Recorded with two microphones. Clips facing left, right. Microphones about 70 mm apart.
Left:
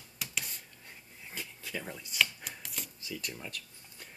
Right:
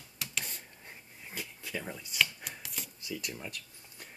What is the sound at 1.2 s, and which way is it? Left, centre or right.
Chopping, centre.